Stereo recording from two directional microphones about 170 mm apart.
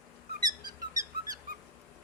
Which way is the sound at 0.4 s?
20° right (ahead or behind).